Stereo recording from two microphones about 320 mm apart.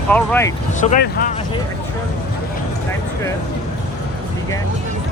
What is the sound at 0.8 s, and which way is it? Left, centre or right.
Speech, left.